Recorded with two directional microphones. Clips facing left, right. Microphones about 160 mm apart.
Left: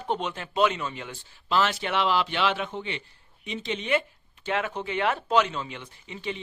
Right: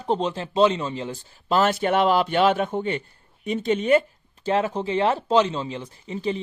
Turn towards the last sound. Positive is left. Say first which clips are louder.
# right 8 dB
turn(degrees=-35)  # may be behind; listen again after turning